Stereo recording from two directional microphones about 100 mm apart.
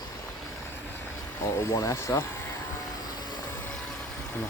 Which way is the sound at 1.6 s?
30° left (ahead or behind).